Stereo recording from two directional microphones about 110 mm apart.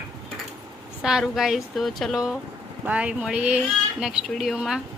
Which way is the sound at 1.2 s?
Centre (ahead or behind).